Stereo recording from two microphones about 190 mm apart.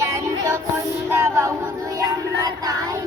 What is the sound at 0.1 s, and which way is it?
Music, 15° right (ahead or behind).